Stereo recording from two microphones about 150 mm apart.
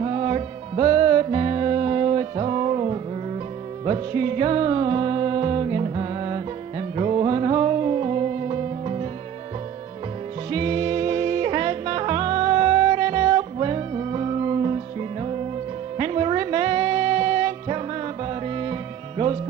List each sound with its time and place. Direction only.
0.0 s music: 40° right (ahead or behind)
10.5 s music: 35° right (ahead or behind)